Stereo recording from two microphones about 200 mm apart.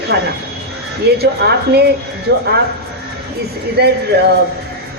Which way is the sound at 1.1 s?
55° right (ahead or behind).